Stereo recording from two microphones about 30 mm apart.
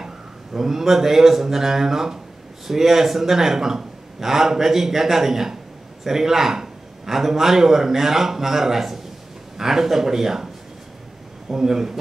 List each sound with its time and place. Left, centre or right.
0.6 s a man's voice: centre